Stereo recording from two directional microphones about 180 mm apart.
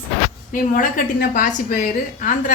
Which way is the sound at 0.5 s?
50° left (ahead or behind).